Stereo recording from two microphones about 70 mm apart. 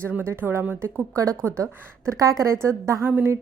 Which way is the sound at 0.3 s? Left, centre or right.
Right.